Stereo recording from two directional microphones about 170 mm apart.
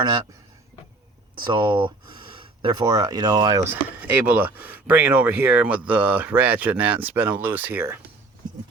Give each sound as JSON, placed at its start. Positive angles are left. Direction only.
{"t": 1.4, "sound": "speech", "side_deg": -30}
{"t": 3.6, "sound": "speech", "side_deg": -15}